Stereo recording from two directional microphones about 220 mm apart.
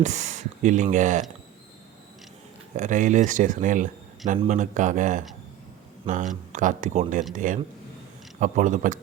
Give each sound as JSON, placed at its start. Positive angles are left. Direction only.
{"t": 0.0, "sound": "speech", "side_deg": -30}
{"t": 2.7, "sound": "speech", "side_deg": -35}